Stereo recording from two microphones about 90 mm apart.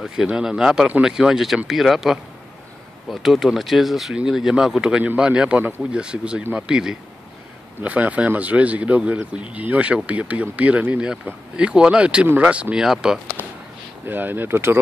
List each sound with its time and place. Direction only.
0.0 s speech: 5° right (ahead or behind)
14.0 s speech: 20° right (ahead or behind)